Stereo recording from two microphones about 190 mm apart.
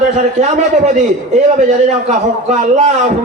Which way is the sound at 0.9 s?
35° right (ahead or behind).